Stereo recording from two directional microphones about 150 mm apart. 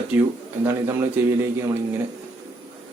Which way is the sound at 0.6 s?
15° right (ahead or behind).